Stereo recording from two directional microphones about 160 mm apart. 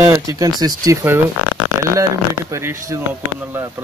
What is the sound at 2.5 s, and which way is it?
Speech, 20° right (ahead or behind).